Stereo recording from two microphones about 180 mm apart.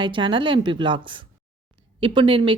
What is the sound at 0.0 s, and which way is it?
Speech, 25° right (ahead or behind).